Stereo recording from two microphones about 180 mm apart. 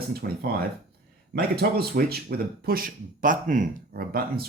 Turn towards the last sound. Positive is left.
turn(degrees=-55)  # may be behind; listen again after turning